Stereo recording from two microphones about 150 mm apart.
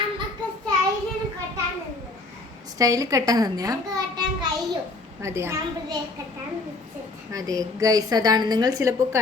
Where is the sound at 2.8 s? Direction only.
25° right (ahead or behind).